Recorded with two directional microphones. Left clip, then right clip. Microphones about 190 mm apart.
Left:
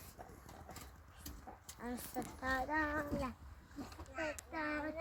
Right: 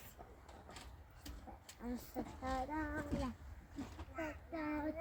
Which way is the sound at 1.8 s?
30° left (ahead or behind).